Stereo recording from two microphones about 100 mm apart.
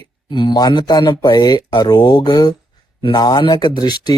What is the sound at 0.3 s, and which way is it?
Speech, 50° left (ahead or behind).